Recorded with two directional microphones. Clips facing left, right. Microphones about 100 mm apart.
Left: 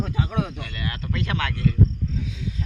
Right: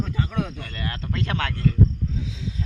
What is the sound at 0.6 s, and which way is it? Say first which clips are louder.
Speech: even; 35° right (ahead or behind).